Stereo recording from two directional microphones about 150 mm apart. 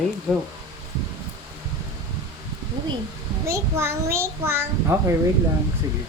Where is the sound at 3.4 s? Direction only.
20° right (ahead or behind).